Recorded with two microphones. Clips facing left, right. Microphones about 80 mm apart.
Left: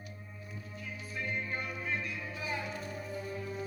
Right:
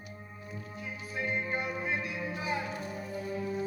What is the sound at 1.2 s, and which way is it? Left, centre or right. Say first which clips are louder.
Music: right 4 dB; right.